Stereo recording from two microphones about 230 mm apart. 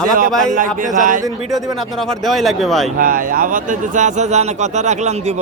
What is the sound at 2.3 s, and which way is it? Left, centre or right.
Speech, centre.